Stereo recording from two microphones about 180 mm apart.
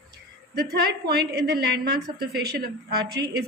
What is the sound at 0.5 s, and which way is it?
A woman's voice, 65° right (ahead or behind).